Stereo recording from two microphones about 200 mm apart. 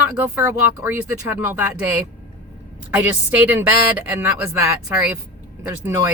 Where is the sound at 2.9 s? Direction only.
10° right (ahead or behind).